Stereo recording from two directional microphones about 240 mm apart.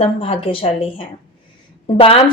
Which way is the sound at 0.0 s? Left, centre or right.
Left.